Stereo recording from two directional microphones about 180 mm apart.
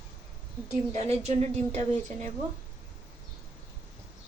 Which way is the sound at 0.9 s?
35° right (ahead or behind).